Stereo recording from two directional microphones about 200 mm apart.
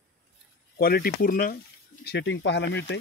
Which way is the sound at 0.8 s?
50° left (ahead or behind).